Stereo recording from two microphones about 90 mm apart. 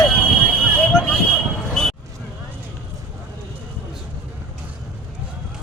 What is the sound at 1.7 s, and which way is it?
Basketball bounce, 5° left (ahead or behind).